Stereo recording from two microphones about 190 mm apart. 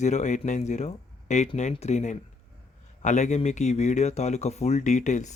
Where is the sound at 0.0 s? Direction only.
40° left (ahead or behind).